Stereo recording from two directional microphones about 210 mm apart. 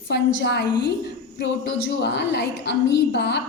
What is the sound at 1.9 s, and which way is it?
A woman's voice, 55° left (ahead or behind).